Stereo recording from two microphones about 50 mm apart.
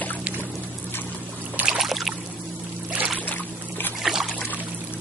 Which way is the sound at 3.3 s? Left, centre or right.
Left.